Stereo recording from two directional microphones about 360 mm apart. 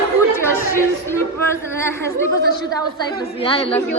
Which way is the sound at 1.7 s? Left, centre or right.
Centre.